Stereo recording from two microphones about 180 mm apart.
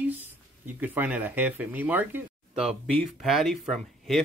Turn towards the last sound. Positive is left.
turn(degrees=0)  # may be behind; listen again after turning